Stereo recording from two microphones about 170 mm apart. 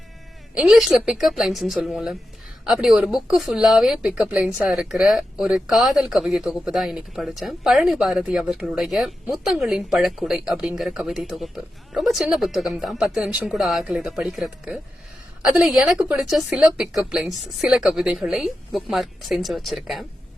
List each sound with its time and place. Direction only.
0.5 s a woman's voice: centre (ahead or behind)